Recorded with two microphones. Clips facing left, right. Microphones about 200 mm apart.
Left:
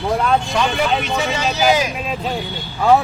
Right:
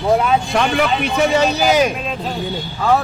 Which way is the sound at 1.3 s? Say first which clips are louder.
Even; 55° right (ahead or behind).